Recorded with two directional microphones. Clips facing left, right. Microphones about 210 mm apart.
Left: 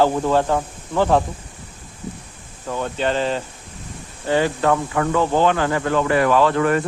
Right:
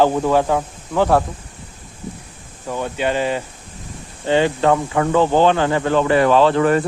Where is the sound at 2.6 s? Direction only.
10° right (ahead or behind).